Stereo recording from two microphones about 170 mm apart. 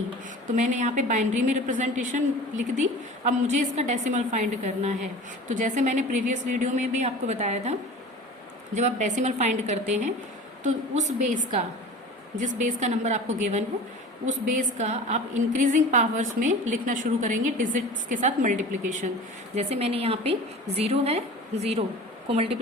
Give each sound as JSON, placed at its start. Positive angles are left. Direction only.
{"t": 0.5, "sound": "a woman's voice", "side_deg": -45}
{"t": 12.4, "sound": "a woman's voice", "side_deg": -45}
{"t": 19.5, "sound": "a woman's voice", "side_deg": -35}